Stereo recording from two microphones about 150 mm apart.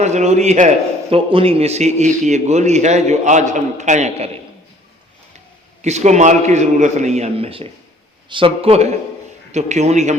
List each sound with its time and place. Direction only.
0.0 s speech: 50° right (ahead or behind)
1.1 s speech: 40° right (ahead or behind)
5.8 s a man's voice: 50° right (ahead or behind)